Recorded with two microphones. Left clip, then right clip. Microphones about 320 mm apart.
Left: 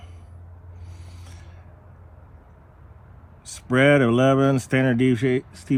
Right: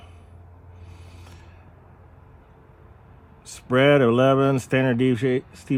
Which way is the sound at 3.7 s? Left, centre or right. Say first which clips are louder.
Even; centre.